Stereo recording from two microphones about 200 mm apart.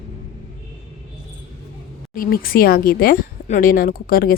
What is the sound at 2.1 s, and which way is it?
A woman's voice, 45° left (ahead or behind).